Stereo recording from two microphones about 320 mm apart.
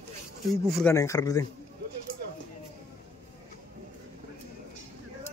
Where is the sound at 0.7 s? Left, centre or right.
Centre.